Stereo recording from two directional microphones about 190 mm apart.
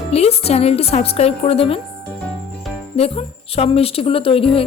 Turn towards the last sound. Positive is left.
turn(degrees=30)  # may be behind; listen again after turning